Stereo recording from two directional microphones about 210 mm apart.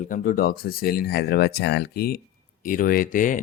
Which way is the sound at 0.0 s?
40° left (ahead or behind).